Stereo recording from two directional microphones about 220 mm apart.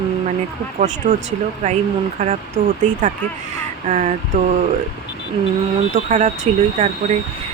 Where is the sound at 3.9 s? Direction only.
30° right (ahead or behind).